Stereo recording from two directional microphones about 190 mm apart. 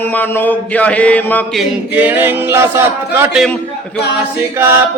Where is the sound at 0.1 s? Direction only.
10° left (ahead or behind).